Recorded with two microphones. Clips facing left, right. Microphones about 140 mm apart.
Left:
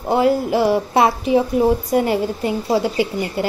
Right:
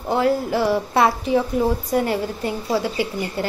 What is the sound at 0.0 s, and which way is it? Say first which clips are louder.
A woman's voice: left 3 dB; 20° left (ahead or behind).